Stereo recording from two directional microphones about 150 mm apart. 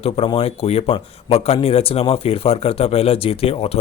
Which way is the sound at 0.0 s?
35° left (ahead or behind).